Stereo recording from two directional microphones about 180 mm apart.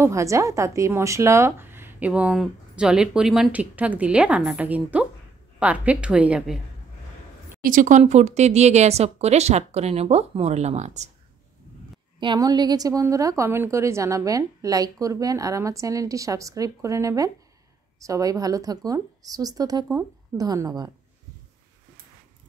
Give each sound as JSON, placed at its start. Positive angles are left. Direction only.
{"t": 0.0, "sound": "a woman's voice", "side_deg": -15}
{"t": 7.6, "sound": "speech", "side_deg": -45}
{"t": 12.2, "sound": "a woman's voice", "side_deg": -25}